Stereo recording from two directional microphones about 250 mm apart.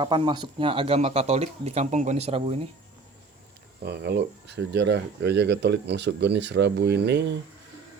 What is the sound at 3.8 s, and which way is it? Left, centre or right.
Speech, right.